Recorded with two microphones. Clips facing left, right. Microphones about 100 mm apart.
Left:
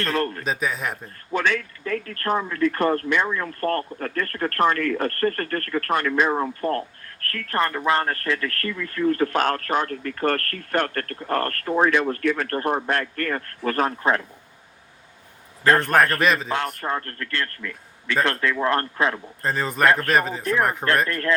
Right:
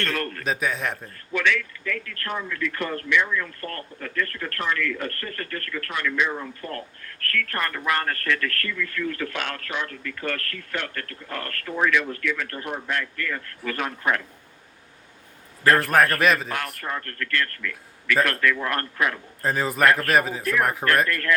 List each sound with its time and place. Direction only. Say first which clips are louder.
0.0 s a man's voice: left 4 dB; 30° left (ahead or behind)
0.4 s a man's voice: even; centre (ahead or behind)
1.3 s speech: left 1 dB; 35° left (ahead or behind)
15.6 s a man's voice: left 1 dB; 25° left (ahead or behind)
16.1 s a man's voice: even; centre (ahead or behind)
16.5 s a man's voice: left 5 dB; 30° left (ahead or behind)
19.4 s a man's voice: right 2 dB; 5° right (ahead or behind)
19.8 s a man's voice: left 1 dB; 30° left (ahead or behind)
20.1 s a man's voice: even; 5° right (ahead or behind)
20.4 s a man's voice: left 1 dB; 30° left (ahead or behind)